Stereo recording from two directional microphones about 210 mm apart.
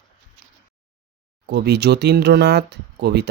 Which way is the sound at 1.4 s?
50° right (ahead or behind).